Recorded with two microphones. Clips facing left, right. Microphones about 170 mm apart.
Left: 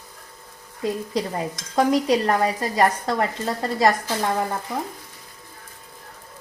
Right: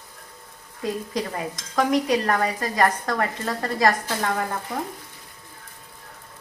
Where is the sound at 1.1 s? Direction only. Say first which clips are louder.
Left 2 dB; 30° left (ahead or behind).